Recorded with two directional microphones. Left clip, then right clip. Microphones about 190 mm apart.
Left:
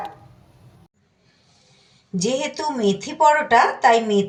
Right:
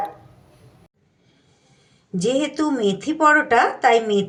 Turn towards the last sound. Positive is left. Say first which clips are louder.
# left 1 dB
turn(degrees=-5)  # may be behind; listen again after turning